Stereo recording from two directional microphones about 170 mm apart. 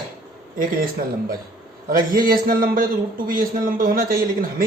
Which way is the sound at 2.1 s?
60° right (ahead or behind).